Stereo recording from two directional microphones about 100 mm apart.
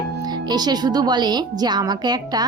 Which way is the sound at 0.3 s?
45° right (ahead or behind).